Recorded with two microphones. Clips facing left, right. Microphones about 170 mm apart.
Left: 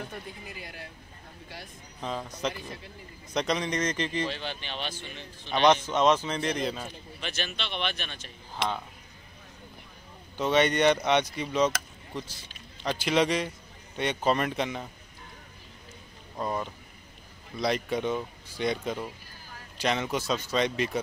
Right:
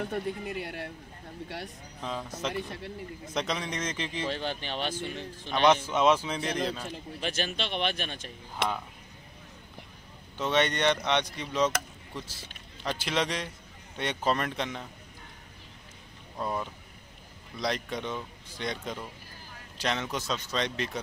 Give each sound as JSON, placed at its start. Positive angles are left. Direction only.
{"t": 0.0, "sound": "speech", "side_deg": -60}
{"t": 2.0, "sound": "speech", "side_deg": 0}
{"t": 2.5, "sound": "speech", "side_deg": -65}
{"t": 3.3, "sound": "speech", "side_deg": 0}
{"t": 4.3, "sound": "speech", "side_deg": -45}
{"t": 5.5, "sound": "speech", "side_deg": -5}
{"t": 7.2, "sound": "speech", "side_deg": -45}
{"t": 10.3, "sound": "speech", "side_deg": 5}
{"t": 12.8, "sound": "speech", "side_deg": 0}
{"t": 16.3, "sound": "speech", "side_deg": 0}